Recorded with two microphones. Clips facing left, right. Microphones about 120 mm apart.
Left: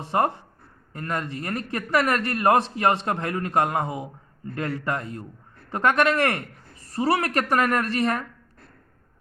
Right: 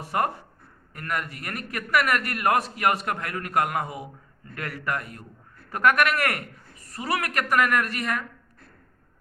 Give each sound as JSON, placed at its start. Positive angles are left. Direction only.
{"t": 0.0, "sound": "a man's voice", "side_deg": 25}